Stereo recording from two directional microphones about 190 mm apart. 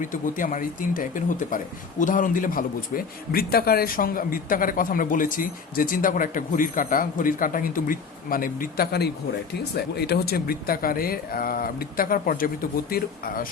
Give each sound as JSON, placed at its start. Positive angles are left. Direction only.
{"t": 0.0, "sound": "speech", "side_deg": 45}